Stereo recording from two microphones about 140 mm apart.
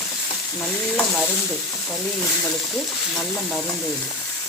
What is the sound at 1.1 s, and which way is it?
Speech, centre (ahead or behind).